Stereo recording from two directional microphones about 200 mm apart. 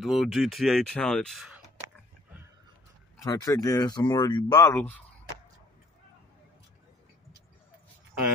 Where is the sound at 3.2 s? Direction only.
15° left (ahead or behind).